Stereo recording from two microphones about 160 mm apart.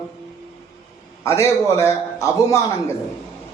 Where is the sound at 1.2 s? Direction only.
20° left (ahead or behind).